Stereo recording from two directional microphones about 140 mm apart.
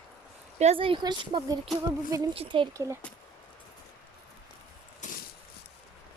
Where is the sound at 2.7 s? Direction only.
20° right (ahead or behind).